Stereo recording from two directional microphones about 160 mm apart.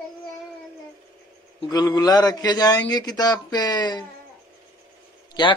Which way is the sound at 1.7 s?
25° left (ahead or behind).